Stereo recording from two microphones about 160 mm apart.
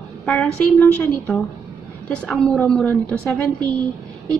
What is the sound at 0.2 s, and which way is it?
A woman's voice, 5° left (ahead or behind).